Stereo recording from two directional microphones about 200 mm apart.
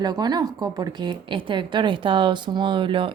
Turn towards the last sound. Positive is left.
turn(degrees=-25)  # may be behind; listen again after turning